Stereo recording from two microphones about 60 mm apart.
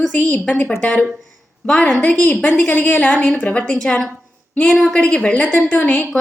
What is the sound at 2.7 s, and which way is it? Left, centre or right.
Speech, left.